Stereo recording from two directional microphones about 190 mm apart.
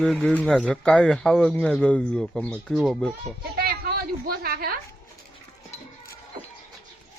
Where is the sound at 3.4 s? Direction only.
55° right (ahead or behind).